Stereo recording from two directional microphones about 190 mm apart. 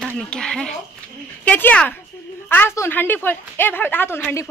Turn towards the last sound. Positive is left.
turn(degrees=10)  # may be behind; listen again after turning